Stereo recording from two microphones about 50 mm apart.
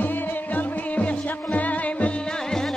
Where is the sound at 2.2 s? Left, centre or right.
Centre.